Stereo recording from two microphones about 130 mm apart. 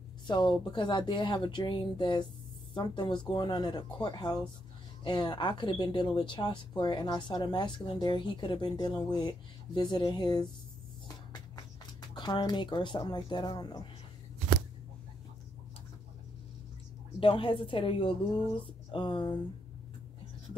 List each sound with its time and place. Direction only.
0.3 s speech: 35° left (ahead or behind)
12.0 s speech: 35° left (ahead or behind)
17.2 s speech: 40° left (ahead or behind)